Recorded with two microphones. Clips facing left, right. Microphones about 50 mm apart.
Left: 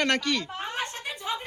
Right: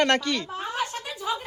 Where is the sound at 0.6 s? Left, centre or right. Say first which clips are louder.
Right 3 dB; left.